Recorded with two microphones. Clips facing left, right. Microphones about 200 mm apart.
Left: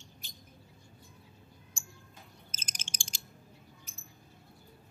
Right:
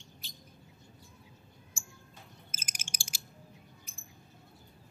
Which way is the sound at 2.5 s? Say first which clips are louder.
Left 1 dB; 10° right (ahead or behind).